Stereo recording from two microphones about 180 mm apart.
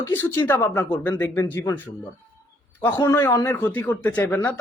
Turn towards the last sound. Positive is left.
turn(degrees=10)  # may be behind; listen again after turning